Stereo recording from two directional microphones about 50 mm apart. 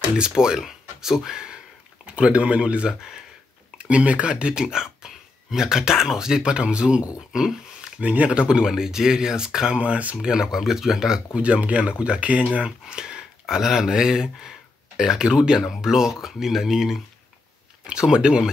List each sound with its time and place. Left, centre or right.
0.2 s speech: centre
2.9 s speech: centre
3.7 s speech: right
9.8 s speech: right
10.2 s speech: centre
12.8 s speech: centre
17.8 s speech: centre